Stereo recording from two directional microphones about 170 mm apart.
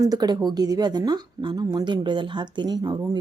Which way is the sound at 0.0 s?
25° right (ahead or behind).